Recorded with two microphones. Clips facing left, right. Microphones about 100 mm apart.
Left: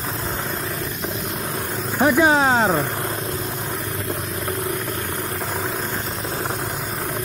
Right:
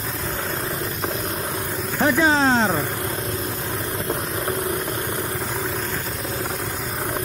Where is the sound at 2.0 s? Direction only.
15° left (ahead or behind).